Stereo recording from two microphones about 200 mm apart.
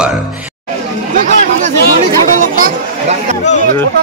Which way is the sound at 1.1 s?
40° right (ahead or behind).